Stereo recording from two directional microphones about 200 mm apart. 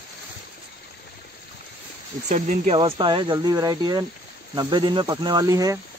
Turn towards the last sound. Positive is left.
turn(degrees=-20)  # may be behind; listen again after turning